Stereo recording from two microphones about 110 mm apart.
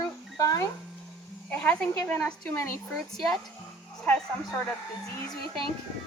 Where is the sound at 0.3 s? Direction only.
30° left (ahead or behind).